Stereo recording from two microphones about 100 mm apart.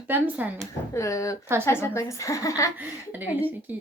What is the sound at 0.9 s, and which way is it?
A woman's voice, 30° left (ahead or behind).